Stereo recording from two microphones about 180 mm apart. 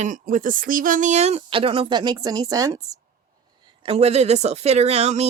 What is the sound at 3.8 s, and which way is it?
A woman's voice, 35° right (ahead or behind).